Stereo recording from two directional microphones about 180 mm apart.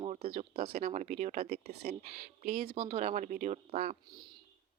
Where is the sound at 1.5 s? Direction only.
60° right (ahead or behind).